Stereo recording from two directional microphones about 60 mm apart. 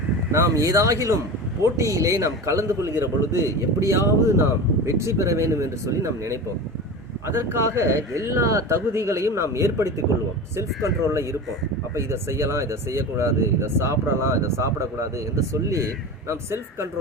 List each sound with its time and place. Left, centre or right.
0.3 s speech: right
7.3 s speech: right